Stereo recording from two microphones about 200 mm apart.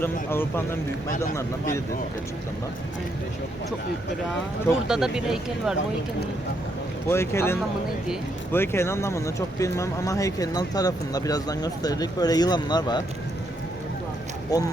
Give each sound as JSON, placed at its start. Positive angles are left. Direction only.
{"t": 0.0, "sound": "speech", "side_deg": 10}
{"t": 4.9, "sound": "speech", "side_deg": -5}
{"t": 7.1, "sound": "speech", "side_deg": 10}
{"t": 14.5, "sound": "speech", "side_deg": 15}